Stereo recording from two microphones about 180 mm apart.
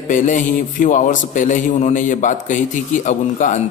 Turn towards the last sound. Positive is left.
turn(degrees=45)  # may be behind; listen again after turning